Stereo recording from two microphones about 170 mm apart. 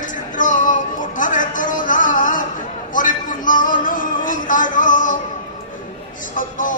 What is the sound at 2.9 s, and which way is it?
Music, 50° left (ahead or behind).